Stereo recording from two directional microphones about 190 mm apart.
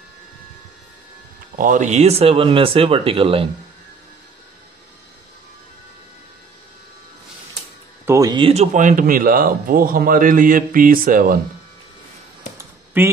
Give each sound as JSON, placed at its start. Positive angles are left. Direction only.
{"t": 1.6, "sound": "speech", "side_deg": -40}
{"t": 8.0, "sound": "speech", "side_deg": -15}
{"t": 12.5, "sound": "a sound", "side_deg": -10}